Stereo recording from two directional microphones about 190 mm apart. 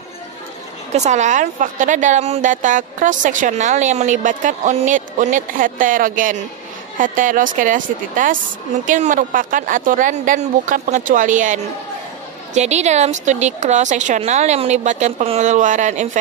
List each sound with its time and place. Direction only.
0.9 s a woman's voice: 40° right (ahead or behind)